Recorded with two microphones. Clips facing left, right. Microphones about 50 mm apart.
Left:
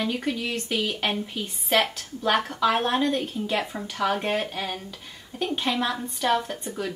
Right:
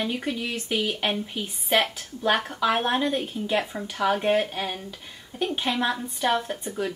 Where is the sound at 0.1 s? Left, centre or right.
Centre.